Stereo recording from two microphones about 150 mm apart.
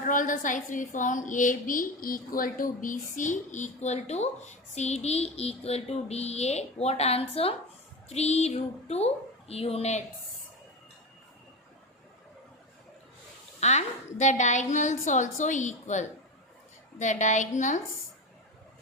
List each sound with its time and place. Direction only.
0.0 s a woman's voice: 60° left (ahead or behind); by 10.0 s 45° left (ahead or behind)
13.6 s a woman's voice: 50° left (ahead or behind)